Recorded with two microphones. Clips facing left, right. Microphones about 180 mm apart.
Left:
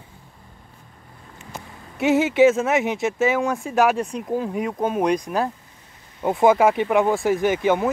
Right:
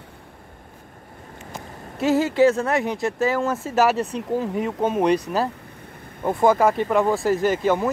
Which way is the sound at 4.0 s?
10° left (ahead or behind).